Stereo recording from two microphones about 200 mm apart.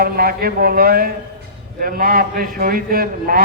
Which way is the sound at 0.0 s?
50° right (ahead or behind).